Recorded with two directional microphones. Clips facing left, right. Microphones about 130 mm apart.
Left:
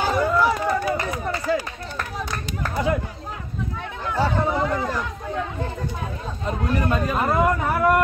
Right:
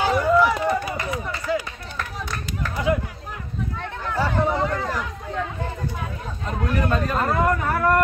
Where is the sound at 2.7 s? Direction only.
35° left (ahead or behind).